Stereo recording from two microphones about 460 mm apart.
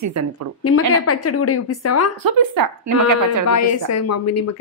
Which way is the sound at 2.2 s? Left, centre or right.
Right.